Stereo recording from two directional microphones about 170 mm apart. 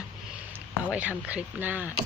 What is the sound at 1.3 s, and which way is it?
Speech, 10° right (ahead or behind).